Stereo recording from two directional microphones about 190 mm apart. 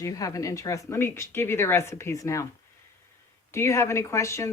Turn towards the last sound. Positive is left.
turn(degrees=15)  # may be behind; listen again after turning